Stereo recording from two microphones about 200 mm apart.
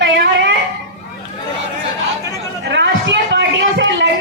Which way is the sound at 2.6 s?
60° right (ahead or behind).